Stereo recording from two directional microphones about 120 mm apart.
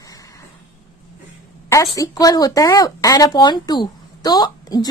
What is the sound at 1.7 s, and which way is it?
Speech, 25° left (ahead or behind).